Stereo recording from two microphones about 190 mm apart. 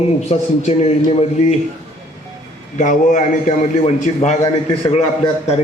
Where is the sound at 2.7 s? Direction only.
40° left (ahead or behind).